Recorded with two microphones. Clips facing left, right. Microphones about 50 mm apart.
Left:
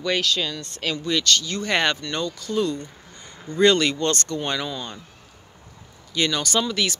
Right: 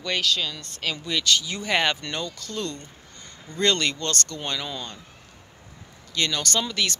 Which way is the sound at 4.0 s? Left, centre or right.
Left.